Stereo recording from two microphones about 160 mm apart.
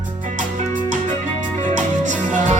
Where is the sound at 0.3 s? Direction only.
55° right (ahead or behind).